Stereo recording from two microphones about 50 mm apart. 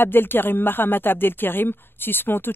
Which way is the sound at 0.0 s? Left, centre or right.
Left.